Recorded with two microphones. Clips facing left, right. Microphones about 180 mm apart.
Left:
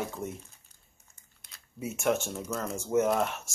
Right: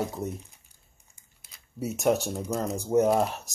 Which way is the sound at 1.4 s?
5° right (ahead or behind).